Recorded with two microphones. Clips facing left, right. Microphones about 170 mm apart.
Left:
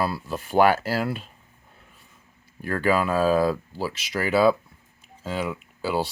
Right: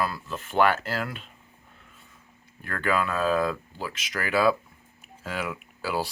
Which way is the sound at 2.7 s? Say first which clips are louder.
Left 5 dB; 35° left (ahead or behind).